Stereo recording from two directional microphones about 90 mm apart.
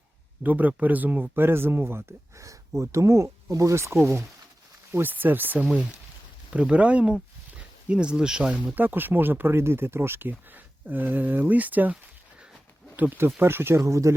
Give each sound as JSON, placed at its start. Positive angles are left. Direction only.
{"t": 0.4, "sound": "speech", "side_deg": -20}
{"t": 8.7, "sound": "speech", "side_deg": -20}
{"t": 13.0, "sound": "speech", "side_deg": -25}